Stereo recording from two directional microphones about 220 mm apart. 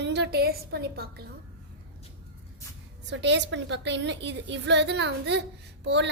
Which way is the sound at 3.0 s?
55° right (ahead or behind).